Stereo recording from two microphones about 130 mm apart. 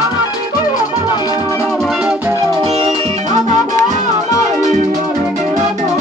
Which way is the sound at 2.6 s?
50° right (ahead or behind).